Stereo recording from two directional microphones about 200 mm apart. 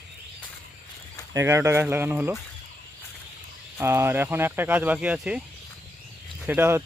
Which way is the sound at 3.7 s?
10° right (ahead or behind).